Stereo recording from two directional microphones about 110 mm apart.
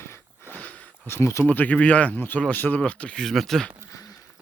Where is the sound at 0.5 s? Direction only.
15° left (ahead or behind).